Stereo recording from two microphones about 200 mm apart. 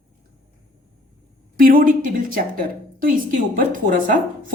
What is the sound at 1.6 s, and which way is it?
Speech, 45° right (ahead or behind).